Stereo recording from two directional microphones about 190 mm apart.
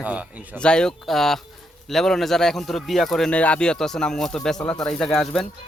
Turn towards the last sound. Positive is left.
turn(degrees=5)  # may be behind; listen again after turning